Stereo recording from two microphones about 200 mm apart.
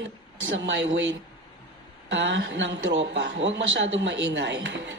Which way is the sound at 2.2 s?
65° right (ahead or behind).